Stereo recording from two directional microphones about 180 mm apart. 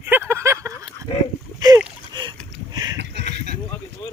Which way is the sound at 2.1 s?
25° right (ahead or behind).